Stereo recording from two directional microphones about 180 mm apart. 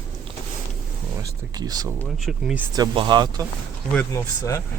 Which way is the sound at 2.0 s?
Centre (ahead or behind).